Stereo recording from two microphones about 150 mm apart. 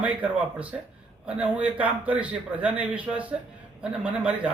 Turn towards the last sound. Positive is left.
turn(degrees=-10)  # may be behind; listen again after turning